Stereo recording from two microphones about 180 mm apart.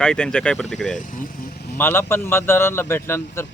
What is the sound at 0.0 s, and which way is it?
Speech, 5° left (ahead or behind).